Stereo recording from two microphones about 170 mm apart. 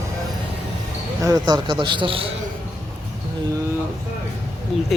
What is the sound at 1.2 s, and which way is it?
A man's voice, 20° right (ahead or behind).